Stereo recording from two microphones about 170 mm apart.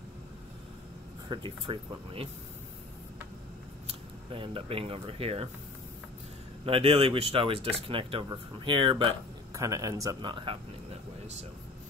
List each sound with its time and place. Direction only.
1.3 s speech: 30° right (ahead or behind)
4.3 s speech: 35° right (ahead or behind)
6.6 s speech: 35° right (ahead or behind)
9.5 s speech: 20° right (ahead or behind)
10.4 s a sound: 35° right (ahead or behind)